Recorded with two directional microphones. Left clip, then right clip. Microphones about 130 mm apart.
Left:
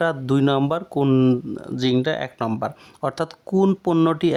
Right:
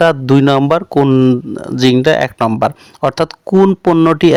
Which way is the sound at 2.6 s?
45° right (ahead or behind).